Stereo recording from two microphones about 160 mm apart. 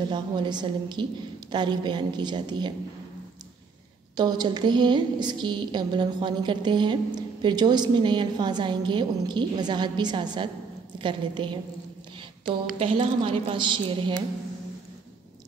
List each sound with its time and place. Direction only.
0.1 s a woman's voice: 30° right (ahead or behind)
4.2 s a woman's voice: 25° right (ahead or behind)
12.7 s a woman's voice: 35° right (ahead or behind)